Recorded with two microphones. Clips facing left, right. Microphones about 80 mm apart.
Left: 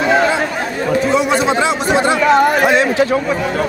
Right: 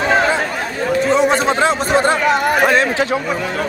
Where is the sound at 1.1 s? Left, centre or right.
Right.